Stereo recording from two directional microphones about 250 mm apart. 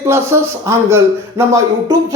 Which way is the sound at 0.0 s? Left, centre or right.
Centre.